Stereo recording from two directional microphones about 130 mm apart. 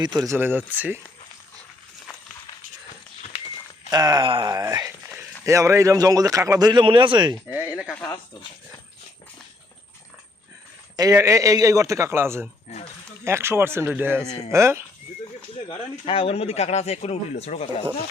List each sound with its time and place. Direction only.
0.0 s speech: 35° right (ahead or behind)
0.3 s speech: 15° right (ahead or behind)
3.8 s a sound: 30° right (ahead or behind)
5.5 s a man's voice: 20° right (ahead or behind)
7.5 s a sound: 10° right (ahead or behind)
10.9 s a man's voice: 25° right (ahead or behind)
12.7 s speech: 55° left (ahead or behind)
13.2 s a man's voice: 20° right (ahead or behind)
14.3 s speech: 50° left (ahead or behind)
14.5 s a man's voice: 20° right (ahead or behind)
15.7 s speech: 45° left (ahead or behind)